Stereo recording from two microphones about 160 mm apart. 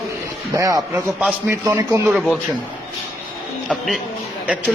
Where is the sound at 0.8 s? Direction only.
Centre (ahead or behind).